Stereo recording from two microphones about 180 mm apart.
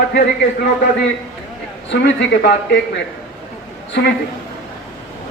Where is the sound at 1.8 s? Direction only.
80° left.